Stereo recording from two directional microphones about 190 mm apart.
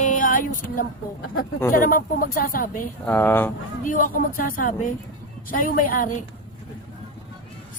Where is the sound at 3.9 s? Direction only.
45° left (ahead or behind).